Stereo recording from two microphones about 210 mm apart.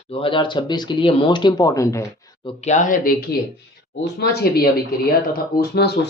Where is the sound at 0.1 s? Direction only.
25° left (ahead or behind).